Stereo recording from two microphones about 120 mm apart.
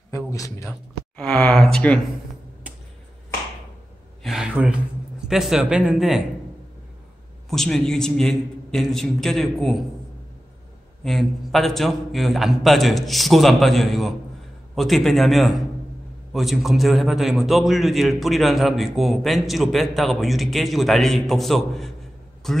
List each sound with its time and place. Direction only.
0.3 s a man's voice: 25° left (ahead or behind)
1.1 s speech: 10° left (ahead or behind)
4.2 s a man's voice: 5° right (ahead or behind)
7.4 s a man's voice: 5° left (ahead or behind)
11.1 s a man's voice: centre (ahead or behind)